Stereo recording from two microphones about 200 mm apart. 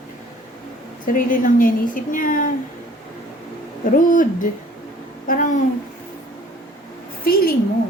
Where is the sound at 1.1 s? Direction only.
40° left (ahead or behind).